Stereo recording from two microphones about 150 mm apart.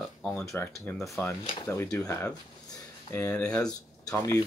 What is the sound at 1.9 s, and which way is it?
Speech, 20° left (ahead or behind).